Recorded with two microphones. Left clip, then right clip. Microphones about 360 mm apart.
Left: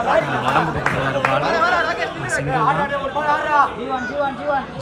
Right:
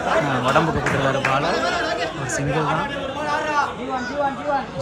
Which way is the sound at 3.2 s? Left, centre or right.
Centre.